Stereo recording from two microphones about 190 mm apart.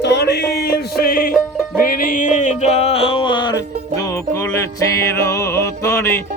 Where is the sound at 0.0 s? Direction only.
60° left (ahead or behind); by 4.0 s 20° left (ahead or behind).